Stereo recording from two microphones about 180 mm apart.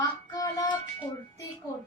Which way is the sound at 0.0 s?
20° left (ahead or behind).